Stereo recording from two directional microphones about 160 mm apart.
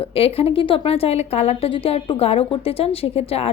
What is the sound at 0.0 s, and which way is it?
A woman's voice, 35° left (ahead or behind).